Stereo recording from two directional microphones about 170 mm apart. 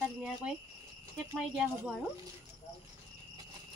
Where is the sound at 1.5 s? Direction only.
5° right (ahead or behind).